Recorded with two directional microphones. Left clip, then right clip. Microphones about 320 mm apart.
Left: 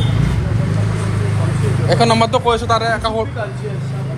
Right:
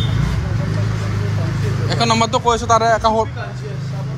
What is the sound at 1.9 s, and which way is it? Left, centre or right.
A man's voice, centre.